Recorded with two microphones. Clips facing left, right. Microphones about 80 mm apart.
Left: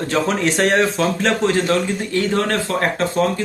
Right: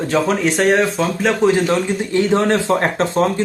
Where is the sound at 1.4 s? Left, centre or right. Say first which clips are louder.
Right 4 dB; centre.